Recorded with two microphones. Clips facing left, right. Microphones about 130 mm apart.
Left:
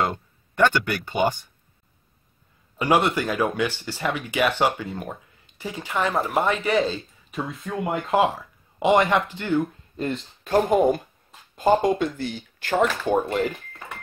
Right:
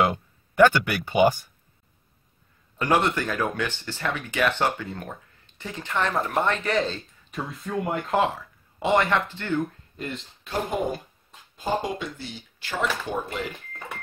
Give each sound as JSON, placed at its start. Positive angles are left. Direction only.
{"t": 0.0, "sound": "speech", "side_deg": -10}
{"t": 2.8, "sound": "speech", "side_deg": 10}
{"t": 10.4, "sound": "speech", "side_deg": 50}